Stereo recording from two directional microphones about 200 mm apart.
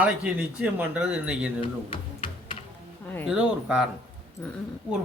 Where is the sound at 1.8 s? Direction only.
25° left (ahead or behind).